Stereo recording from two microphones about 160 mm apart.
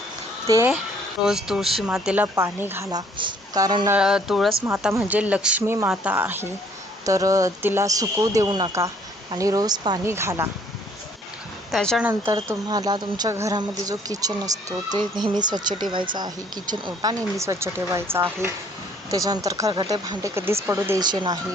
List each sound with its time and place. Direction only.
1.3 s speech: 5° right (ahead or behind)
3.2 s speech: 25° right (ahead or behind)
3.8 s speech: 5° right (ahead or behind)
11.7 s speech: centre (ahead or behind)
12.5 s speech: 25° right (ahead or behind)
21.0 s speech: 25° right (ahead or behind)